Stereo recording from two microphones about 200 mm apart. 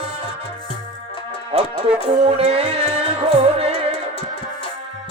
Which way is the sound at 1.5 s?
30° right (ahead or behind).